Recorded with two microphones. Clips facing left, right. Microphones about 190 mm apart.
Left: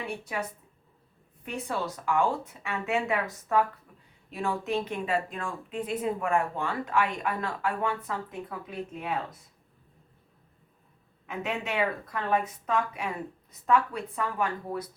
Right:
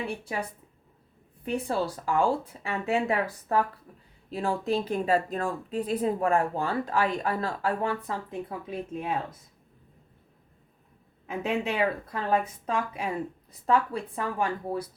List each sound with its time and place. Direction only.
0.3 s speech: 35° right (ahead or behind)
1.5 s speech: 35° right (ahead or behind)
11.3 s speech: 30° right (ahead or behind)